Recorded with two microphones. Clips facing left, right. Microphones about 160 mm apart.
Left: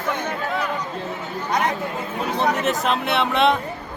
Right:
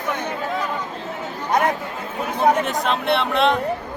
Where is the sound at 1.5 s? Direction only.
50° right (ahead or behind).